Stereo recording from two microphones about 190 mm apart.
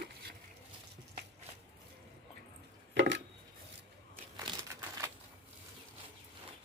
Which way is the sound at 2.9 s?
75° right (ahead or behind).